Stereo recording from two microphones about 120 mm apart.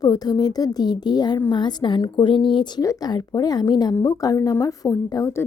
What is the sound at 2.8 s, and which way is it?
A woman's voice, 30° left (ahead or behind).